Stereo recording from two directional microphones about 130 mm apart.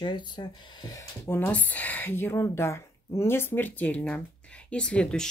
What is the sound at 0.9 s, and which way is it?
Speech, 20° left (ahead or behind).